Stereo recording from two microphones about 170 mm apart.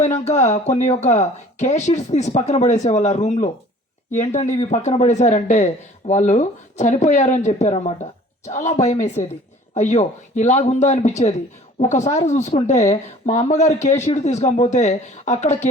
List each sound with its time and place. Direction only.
0.0 s speech: 40° left (ahead or behind)